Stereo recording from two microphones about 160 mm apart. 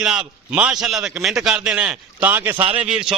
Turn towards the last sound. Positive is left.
turn(degrees=-5)  # may be behind; listen again after turning